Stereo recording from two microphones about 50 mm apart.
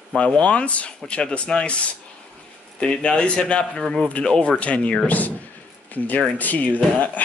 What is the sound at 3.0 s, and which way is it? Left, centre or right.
A man's voice, left.